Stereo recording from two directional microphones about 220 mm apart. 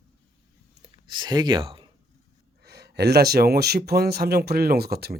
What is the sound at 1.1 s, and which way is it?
Speech, 20° right (ahead or behind).